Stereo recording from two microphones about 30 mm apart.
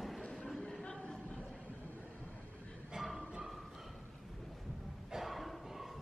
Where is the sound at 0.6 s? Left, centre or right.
Centre.